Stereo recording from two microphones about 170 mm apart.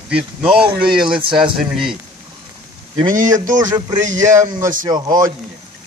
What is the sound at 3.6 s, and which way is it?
Speech, 20° right (ahead or behind).